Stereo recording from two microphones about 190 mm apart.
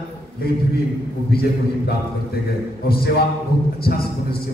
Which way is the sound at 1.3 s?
55° left (ahead or behind).